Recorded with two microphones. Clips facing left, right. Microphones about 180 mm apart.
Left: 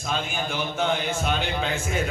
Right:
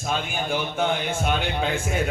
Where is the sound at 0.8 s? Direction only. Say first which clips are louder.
Left 1 dB; 55° right (ahead or behind).